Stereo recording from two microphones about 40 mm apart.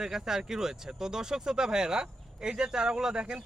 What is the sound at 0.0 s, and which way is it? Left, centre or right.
Speech, centre.